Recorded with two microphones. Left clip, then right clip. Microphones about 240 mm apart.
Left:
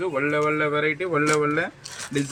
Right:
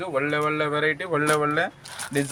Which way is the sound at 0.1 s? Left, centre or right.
Right.